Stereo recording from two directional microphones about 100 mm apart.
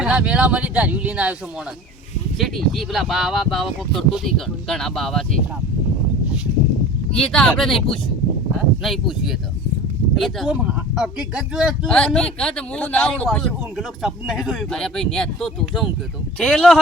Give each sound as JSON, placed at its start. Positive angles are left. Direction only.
{"t": 0.0, "sound": "speech", "side_deg": -10}
{"t": 2.4, "sound": "speech", "side_deg": 0}
{"t": 7.2, "sound": "speech", "side_deg": 5}
{"t": 10.5, "sound": "speech", "side_deg": -10}
{"t": 11.9, "sound": "speech", "side_deg": 10}
{"t": 13.2, "sound": "speech", "side_deg": 0}
{"t": 14.7, "sound": "speech", "side_deg": 5}